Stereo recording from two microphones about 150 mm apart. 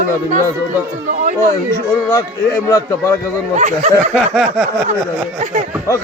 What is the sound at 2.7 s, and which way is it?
Speech, 20° left (ahead or behind).